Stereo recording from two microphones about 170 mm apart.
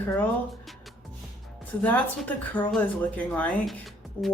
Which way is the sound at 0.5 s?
Centre (ahead or behind).